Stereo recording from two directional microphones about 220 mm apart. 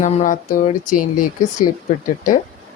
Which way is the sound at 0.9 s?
90° left.